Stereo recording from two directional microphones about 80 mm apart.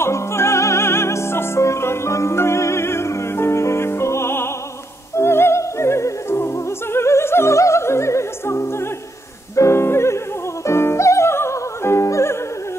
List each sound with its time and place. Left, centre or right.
0.0 s music: left
5.1 s opera: left
9.6 s music: left